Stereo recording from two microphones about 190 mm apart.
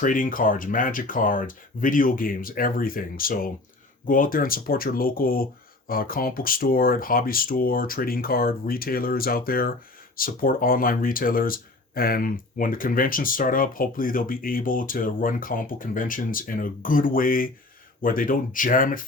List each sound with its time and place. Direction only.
0.0 s speech: 45° left (ahead or behind)